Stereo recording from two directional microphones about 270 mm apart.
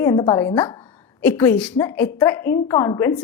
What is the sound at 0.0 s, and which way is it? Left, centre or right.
Speech, centre.